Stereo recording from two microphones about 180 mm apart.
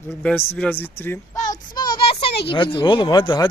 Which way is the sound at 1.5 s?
20° left (ahead or behind).